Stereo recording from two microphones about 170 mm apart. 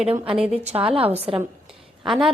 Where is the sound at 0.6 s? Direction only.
35° right (ahead or behind).